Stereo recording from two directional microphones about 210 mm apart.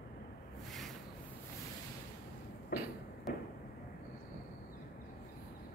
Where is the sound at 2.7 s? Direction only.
45° left (ahead or behind).